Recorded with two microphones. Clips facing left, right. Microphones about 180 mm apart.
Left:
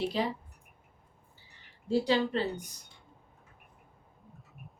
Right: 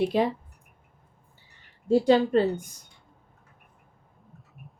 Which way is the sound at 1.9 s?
50° right (ahead or behind).